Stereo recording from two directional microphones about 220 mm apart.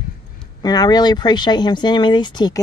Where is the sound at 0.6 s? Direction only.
20° left (ahead or behind).